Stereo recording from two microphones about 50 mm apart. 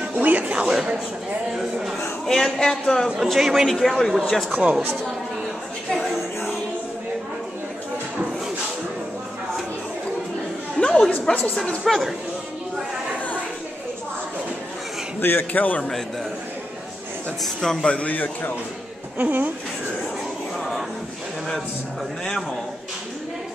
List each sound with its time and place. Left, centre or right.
0.1 s a sound: right
1.5 s a man's voice: centre
2.2 s a man's voice: centre
3.2 s speech: centre
3.8 s a man's voice: centre
4.5 s speech: right
5.9 s a sound: centre
10.8 s chatter: centre
11.8 s speech: centre
15.1 s a man's voice: left
17.4 s a man's voice: centre
17.8 s a man's voice: left
18.1 s a man's voice: left
19.1 s speech: right